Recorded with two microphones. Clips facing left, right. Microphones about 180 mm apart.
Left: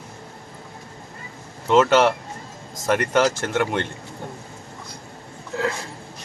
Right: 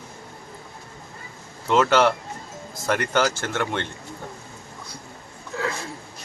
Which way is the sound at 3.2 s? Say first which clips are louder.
Left 4 dB; 30° left (ahead or behind).